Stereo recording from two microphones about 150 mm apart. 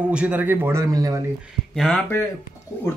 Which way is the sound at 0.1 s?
10° right (ahead or behind).